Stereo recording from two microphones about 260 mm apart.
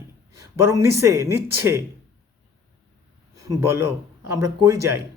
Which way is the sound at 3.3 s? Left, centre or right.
Centre.